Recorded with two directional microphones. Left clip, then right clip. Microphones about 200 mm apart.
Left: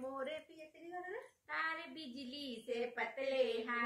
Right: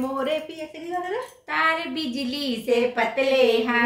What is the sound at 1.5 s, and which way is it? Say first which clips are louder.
Child singing: right 18 dB; 15° right (ahead or behind).